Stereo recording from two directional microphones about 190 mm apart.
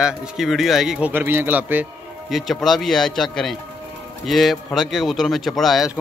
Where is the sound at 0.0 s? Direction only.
5° right (ahead or behind).